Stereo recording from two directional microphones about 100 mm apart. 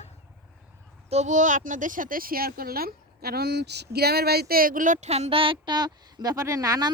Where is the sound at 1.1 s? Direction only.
90° right.